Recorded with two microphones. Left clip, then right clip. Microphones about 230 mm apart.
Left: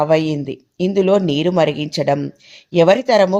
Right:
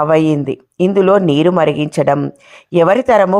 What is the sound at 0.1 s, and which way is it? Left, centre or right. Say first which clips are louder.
Speech: right 4 dB; centre.